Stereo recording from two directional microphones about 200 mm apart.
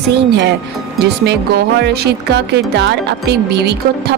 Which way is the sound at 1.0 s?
55° right (ahead or behind).